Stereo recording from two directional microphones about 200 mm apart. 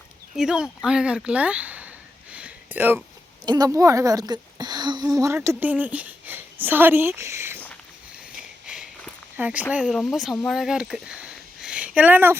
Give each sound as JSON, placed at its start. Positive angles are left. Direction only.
{"t": 0.3, "sound": "speech", "side_deg": -5}
{"t": 2.3, "sound": "a sound", "side_deg": -10}
{"t": 3.4, "sound": "a woman's voice", "side_deg": -20}
{"t": 8.6, "sound": "walk", "side_deg": -5}
{"t": 9.7, "sound": "speech", "side_deg": -5}